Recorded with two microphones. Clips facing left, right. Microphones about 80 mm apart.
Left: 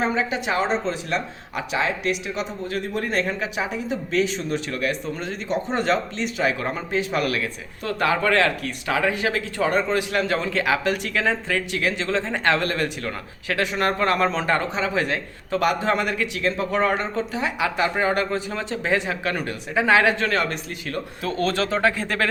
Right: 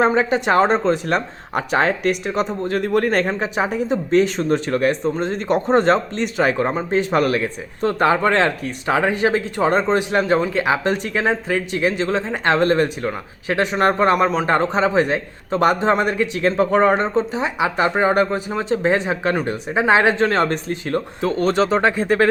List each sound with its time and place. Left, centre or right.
0.0 s speech: right
3.2 s speech: right
6.6 s speech: right
7.0 s speech: right; by 14.4 s centre
14.4 s speech: right